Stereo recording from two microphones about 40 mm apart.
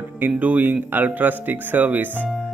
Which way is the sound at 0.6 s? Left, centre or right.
Right.